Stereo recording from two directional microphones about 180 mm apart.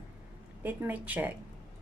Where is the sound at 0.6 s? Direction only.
10° right (ahead or behind).